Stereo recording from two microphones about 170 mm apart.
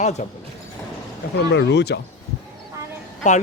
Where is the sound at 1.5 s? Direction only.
90° left.